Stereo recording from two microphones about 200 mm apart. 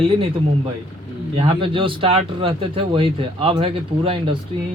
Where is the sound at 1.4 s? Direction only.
25° right (ahead or behind).